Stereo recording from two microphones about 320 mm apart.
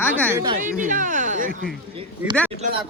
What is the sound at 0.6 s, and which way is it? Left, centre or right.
Speech, right.